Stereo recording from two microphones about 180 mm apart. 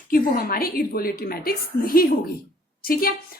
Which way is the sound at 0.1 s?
50° left (ahead or behind).